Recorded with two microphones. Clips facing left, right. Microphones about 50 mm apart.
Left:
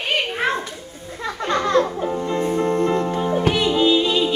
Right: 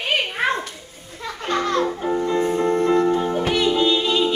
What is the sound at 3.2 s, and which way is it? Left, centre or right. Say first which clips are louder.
Music: left 1 dB; centre.